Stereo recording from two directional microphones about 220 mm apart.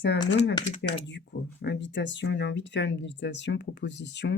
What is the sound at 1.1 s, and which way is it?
Speech, 55° left (ahead or behind).